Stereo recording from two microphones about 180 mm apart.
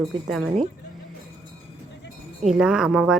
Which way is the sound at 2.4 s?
5° right (ahead or behind).